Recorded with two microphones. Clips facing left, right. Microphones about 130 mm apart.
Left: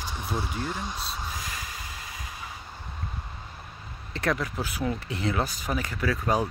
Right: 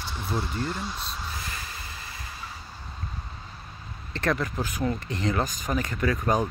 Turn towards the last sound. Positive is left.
turn(degrees=0)  # may be behind; listen again after turning